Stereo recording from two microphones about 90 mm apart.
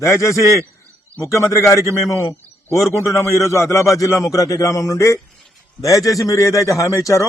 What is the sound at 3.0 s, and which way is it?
A man's voice, 35° left (ahead or behind).